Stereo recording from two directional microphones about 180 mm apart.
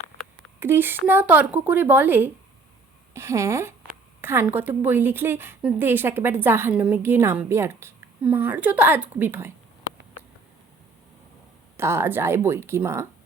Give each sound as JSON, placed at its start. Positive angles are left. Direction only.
{"t": 0.6, "sound": "a woman's voice", "side_deg": -10}
{"t": 4.2, "sound": "a sound", "side_deg": -15}
{"t": 4.8, "sound": "a woman's voice", "side_deg": -10}
{"t": 11.8, "sound": "a woman's voice", "side_deg": -15}